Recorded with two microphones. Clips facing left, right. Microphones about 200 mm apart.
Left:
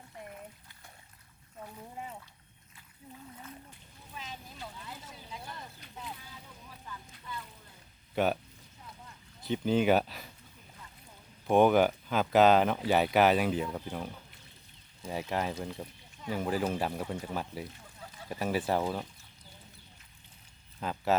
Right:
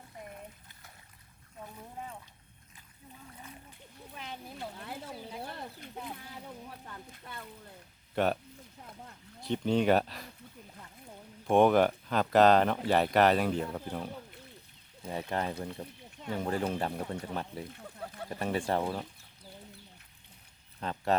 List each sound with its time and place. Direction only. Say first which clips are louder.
4.1 s a sound: right 2 dB; 60° right (ahead or behind)
8.1 s speech: even; centre (ahead or behind)
9.4 s speech: even; centre (ahead or behind)
11.4 s speech: even; centre (ahead or behind)
17.7 s a sound: right 7 dB; 60° right (ahead or behind)
18.3 s speech: left 1 dB; 5° left (ahead or behind)
20.8 s speech: left 1 dB; 5° left (ahead or behind)